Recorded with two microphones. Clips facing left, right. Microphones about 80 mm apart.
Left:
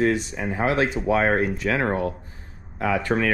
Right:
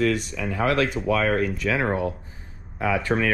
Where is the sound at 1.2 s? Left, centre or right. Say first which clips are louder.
Left 1 dB; left.